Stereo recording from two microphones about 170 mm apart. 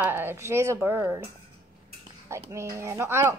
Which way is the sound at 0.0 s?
15° right (ahead or behind).